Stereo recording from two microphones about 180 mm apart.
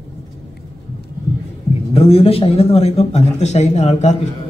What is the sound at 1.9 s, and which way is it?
A man's voice, 35° left (ahead or behind).